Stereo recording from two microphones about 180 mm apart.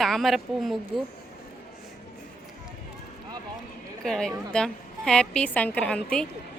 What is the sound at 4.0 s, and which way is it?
A woman's voice, 5° left (ahead or behind).